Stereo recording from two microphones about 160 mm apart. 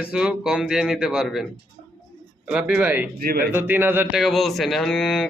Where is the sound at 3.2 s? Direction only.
70° right (ahead or behind).